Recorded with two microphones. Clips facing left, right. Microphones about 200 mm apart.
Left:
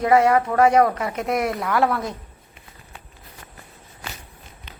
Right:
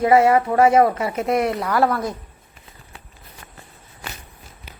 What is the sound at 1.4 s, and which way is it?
Speech, 25° right (ahead or behind).